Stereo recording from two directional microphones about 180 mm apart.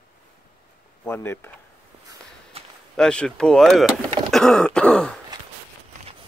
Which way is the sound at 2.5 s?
35° right (ahead or behind).